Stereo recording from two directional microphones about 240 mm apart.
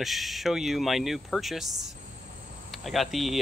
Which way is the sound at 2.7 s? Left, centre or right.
Centre.